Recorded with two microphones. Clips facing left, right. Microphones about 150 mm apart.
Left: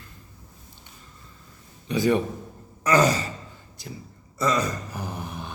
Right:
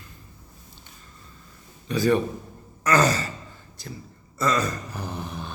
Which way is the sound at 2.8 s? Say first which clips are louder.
Left 1 dB; 10° left (ahead or behind).